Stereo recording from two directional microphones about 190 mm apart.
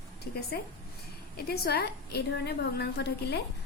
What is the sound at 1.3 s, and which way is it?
A woman's voice, 55° left (ahead or behind).